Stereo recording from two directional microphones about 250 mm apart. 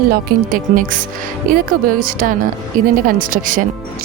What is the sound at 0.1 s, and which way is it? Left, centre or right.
Speech, right.